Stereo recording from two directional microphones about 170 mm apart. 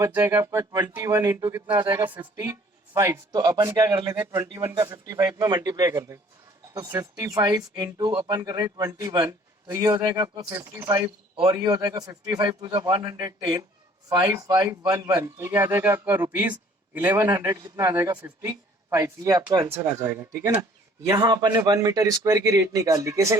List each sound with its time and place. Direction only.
0.0 s a man's voice: 15° right (ahead or behind)